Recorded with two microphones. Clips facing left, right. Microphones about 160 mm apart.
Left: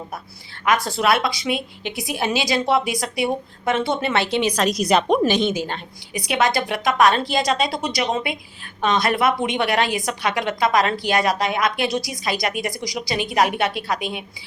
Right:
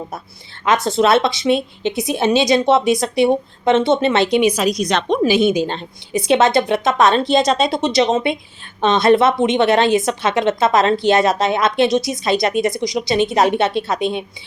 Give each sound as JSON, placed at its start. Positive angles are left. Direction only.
{"t": 0.6, "sound": "a woman's voice", "side_deg": -25}
{"t": 5.3, "sound": "a woman's voice", "side_deg": -10}
{"t": 5.6, "sound": "a woman's voice", "side_deg": -25}